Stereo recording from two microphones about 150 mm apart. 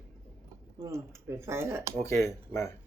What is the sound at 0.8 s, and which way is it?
Speech, 20° right (ahead or behind).